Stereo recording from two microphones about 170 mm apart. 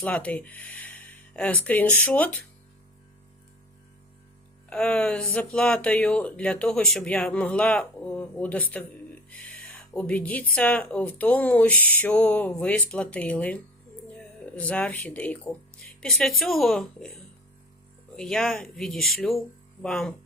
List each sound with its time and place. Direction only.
0.0 s speech: 10° left (ahead or behind)
4.7 s speech: 5° left (ahead or behind)
9.3 s a sound: 10° left (ahead or behind)
10.5 s speech: 10° left (ahead or behind)
18.2 s speech: centre (ahead or behind)